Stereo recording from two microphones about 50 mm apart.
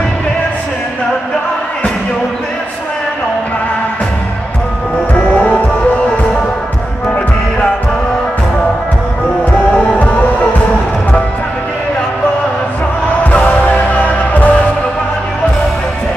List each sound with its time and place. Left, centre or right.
5.1 s music: left
13.3 s music: left